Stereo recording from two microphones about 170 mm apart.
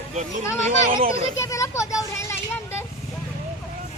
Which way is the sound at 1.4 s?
15° left (ahead or behind).